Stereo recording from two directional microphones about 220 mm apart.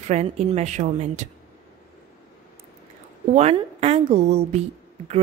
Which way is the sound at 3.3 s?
30° right (ahead or behind).